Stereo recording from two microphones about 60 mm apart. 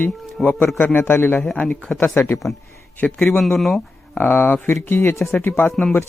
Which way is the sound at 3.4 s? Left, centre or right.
Centre.